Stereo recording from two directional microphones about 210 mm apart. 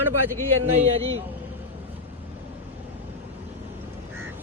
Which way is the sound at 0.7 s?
30° right (ahead or behind).